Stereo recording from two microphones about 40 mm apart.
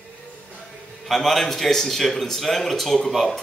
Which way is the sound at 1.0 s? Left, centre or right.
Centre.